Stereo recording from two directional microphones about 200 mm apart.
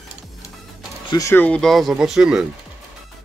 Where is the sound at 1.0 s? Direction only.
15° left (ahead or behind).